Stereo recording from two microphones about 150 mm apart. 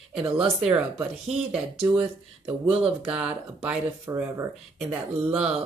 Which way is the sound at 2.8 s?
5° right (ahead or behind).